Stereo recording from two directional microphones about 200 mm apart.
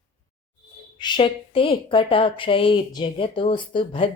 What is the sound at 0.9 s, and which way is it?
A woman's voice, 20° left (ahead or behind).